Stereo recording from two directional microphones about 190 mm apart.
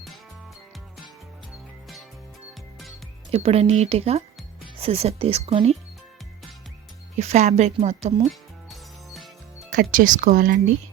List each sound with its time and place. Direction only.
3.3 s speech: 30° right (ahead or behind)
7.2 s speech: 35° right (ahead or behind)
8.3 s music: centre (ahead or behind)
9.9 s speech: 45° right (ahead or behind)